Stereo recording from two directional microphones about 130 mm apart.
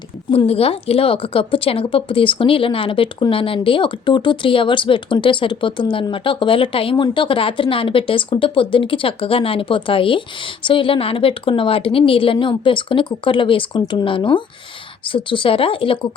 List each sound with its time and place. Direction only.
0.3 s a woman's voice: 50° left (ahead or behind)